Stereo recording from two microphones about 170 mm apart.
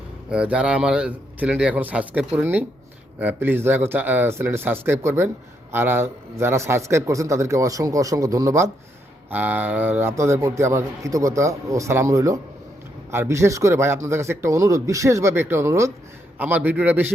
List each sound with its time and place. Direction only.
0.3 s a man's voice: 5° right (ahead or behind)